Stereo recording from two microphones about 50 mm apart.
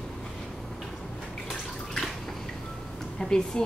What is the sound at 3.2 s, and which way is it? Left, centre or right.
Speech, centre.